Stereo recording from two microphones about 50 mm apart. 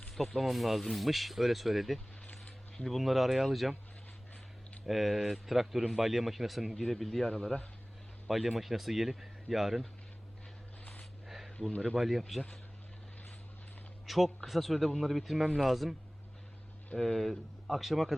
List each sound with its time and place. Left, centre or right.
0.2 s speech: centre
2.2 s a sound: left
2.8 s speech: centre
4.9 s speech: centre
7.3 s speech: centre
8.3 s speech: centre
11.3 s a sound: centre
11.9 s speech: centre
14.1 s speech: centre
17.0 s speech: centre